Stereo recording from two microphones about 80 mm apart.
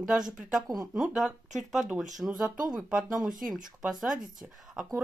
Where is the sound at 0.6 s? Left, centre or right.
Right.